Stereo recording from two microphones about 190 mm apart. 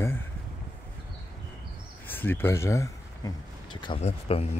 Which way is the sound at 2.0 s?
10° left (ahead or behind).